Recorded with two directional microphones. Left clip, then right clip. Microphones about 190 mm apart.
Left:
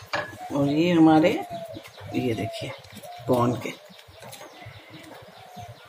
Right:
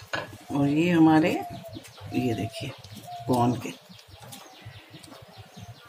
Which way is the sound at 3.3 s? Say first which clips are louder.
Left 2 dB; 20° right (ahead or behind).